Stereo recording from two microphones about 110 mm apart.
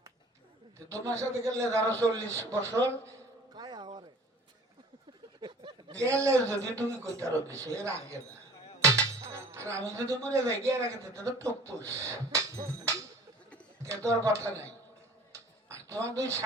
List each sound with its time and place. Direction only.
0.9 s a man's voice: 25° right (ahead or behind)
3.5 s a sound: 40° right (ahead or behind)
5.4 s a sound: 45° right (ahead or behind)
6.0 s a man's voice: 25° right (ahead or behind)
8.8 s music: 25° right (ahead or behind)
9.8 s a man's voice: 25° right (ahead or behind)
13.8 s a man's voice: 25° right (ahead or behind)
15.3 s finger snapping: 30° right (ahead or behind)